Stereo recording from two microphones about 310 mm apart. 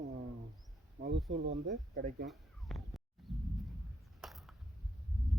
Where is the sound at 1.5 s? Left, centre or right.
Right.